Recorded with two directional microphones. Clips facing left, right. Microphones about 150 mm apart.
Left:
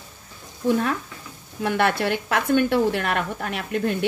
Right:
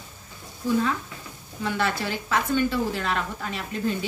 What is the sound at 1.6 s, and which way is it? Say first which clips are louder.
A woman's voice: left 5 dB; 60° left (ahead or behind).